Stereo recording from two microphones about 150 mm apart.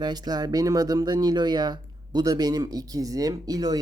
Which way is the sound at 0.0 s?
25° right (ahead or behind).